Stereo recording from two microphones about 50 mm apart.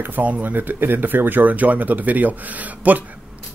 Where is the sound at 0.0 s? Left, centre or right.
Right.